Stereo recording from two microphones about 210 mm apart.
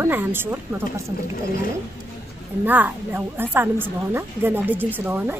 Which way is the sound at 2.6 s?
10° right (ahead or behind).